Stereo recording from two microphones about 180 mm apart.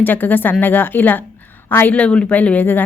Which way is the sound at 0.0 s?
10° left (ahead or behind).